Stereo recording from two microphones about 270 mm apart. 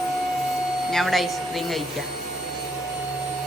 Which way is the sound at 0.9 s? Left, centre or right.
Centre.